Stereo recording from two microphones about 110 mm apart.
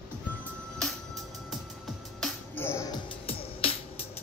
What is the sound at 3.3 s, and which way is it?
Music, 60° left (ahead or behind).